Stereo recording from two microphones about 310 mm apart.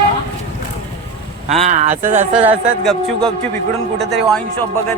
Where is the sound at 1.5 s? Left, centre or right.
Right.